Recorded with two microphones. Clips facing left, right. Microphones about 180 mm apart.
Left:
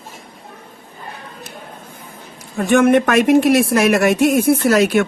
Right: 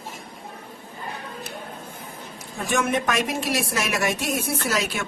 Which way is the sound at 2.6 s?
60° left (ahead or behind).